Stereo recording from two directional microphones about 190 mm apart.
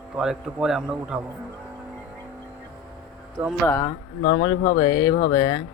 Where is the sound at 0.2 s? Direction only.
5° right (ahead or behind).